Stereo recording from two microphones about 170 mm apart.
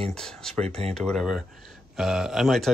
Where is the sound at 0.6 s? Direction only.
40° right (ahead or behind).